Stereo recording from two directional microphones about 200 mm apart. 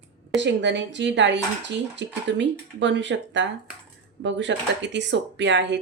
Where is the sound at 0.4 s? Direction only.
65° right (ahead or behind).